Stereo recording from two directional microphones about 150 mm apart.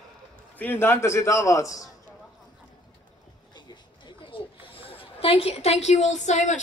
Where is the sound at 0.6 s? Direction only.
15° left (ahead or behind).